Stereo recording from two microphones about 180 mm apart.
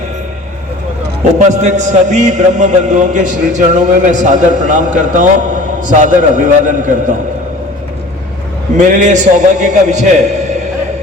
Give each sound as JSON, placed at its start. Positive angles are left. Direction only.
{"t": 1.4, "sound": "a man's voice", "side_deg": -40}
{"t": 8.8, "sound": "a man's voice", "side_deg": -45}